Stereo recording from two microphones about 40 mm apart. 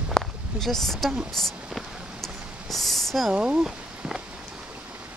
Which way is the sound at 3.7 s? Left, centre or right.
Centre.